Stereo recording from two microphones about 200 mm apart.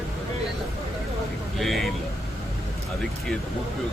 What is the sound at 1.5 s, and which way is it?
Speech, centre (ahead or behind).